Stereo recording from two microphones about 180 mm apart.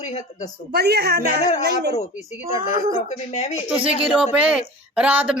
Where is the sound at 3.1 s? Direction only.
40° left (ahead or behind).